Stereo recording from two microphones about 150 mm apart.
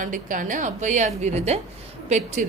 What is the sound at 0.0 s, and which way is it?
A woman's voice, 60° right (ahead or behind).